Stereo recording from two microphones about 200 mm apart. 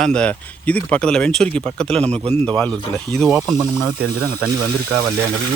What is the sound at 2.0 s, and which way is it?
Speech, 30° right (ahead or behind).